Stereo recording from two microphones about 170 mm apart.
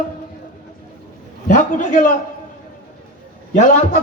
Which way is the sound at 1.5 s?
50° left (ahead or behind).